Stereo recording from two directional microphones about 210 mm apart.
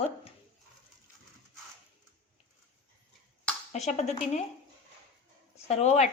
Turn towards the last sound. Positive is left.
turn(degrees=30)  # may be behind; listen again after turning